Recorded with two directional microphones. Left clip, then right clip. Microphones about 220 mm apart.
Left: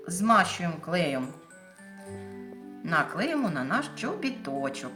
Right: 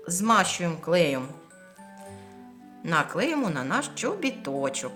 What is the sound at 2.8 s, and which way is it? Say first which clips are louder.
A woman's voice: right 2 dB; 50° right (ahead or behind).